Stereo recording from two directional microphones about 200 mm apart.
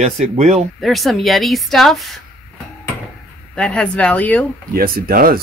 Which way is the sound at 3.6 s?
5° left (ahead or behind).